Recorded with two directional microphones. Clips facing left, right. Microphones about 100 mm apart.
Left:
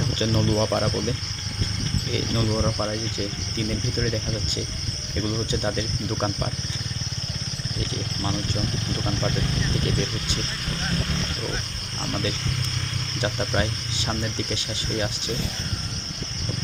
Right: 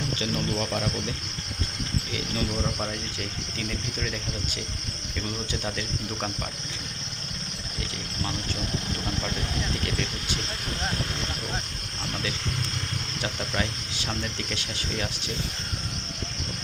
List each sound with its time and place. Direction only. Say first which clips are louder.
0.2 s speech: left 8 dB; 30° left (ahead or behind)
4.0 s speech: left 5 dB; 30° left (ahead or behind)
13.2 s speech: left 5 dB; 25° left (ahead or behind)